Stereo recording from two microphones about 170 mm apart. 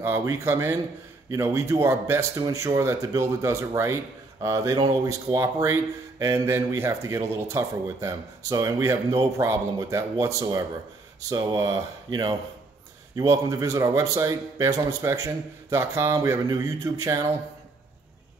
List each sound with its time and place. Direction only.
0.0 s speech: 15° right (ahead or behind)